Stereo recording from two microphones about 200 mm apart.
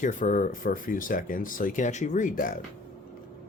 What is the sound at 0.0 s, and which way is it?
Speech, 40° left (ahead or behind).